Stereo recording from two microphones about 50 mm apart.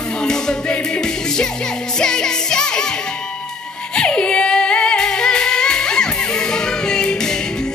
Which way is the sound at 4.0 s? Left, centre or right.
Centre.